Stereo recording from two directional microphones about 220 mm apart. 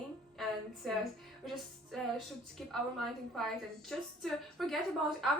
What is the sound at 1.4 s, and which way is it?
Music, centre (ahead or behind).